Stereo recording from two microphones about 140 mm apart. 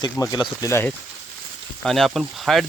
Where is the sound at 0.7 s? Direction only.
20° left (ahead or behind).